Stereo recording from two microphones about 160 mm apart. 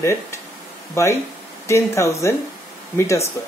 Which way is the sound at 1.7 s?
20° left (ahead or behind).